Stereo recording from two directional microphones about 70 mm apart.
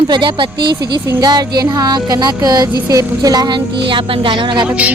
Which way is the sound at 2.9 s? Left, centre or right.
Right.